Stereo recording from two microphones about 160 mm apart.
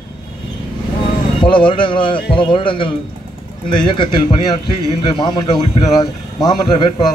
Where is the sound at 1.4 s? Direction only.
30° left (ahead or behind).